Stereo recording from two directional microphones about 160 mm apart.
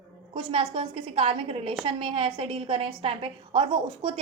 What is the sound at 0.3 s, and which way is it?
A woman's voice, 35° right (ahead or behind).